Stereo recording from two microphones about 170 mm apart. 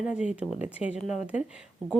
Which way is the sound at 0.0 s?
5° right (ahead or behind).